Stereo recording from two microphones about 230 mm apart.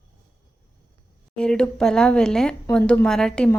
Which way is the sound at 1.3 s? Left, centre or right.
Centre.